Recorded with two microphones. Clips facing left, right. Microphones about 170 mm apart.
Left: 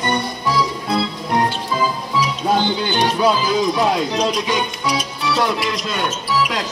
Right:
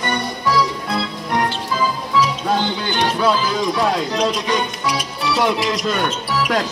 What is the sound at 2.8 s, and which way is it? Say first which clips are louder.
Speech: left 2 dB; 20° left (ahead or behind).